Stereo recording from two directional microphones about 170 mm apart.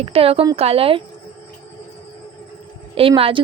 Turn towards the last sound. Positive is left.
turn(degrees=-35)  # may be behind; listen again after turning